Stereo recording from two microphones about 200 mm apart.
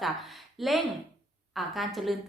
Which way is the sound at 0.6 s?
Centre (ahead or behind).